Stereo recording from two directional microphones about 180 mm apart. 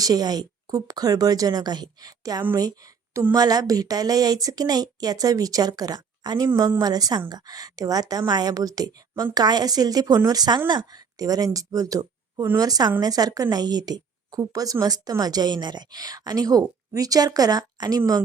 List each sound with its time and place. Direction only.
0.0 s a woman's voice: 20° right (ahead or behind)